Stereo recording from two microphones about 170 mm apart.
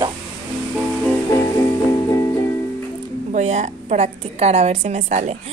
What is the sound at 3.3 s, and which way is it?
A woman's voice, 45° right (ahead or behind).